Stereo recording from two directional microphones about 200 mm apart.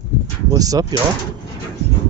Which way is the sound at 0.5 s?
20° right (ahead or behind).